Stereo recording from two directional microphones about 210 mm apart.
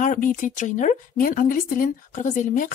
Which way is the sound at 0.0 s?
35° left (ahead or behind).